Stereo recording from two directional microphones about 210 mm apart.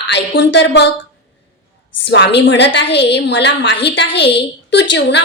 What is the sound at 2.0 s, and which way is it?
A woman's voice, 60° left (ahead or behind).